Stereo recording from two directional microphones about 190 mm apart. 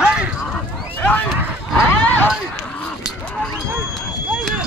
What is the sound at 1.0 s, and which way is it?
Speech, 5° left (ahead or behind).